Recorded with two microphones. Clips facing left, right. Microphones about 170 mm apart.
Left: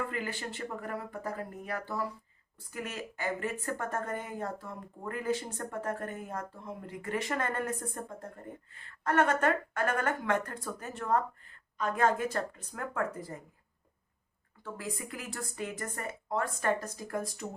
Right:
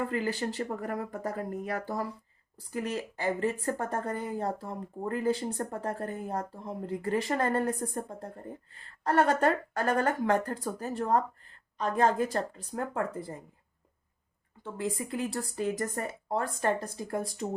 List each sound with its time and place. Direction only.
0.0 s a woman's voice: 35° right (ahead or behind)
14.6 s a woman's voice: 25° right (ahead or behind)